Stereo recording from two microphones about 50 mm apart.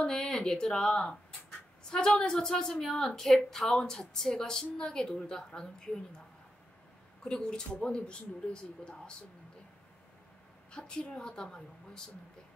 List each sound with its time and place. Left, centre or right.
0.0 s a woman's voice: centre
7.2 s speech: centre
10.7 s speech: centre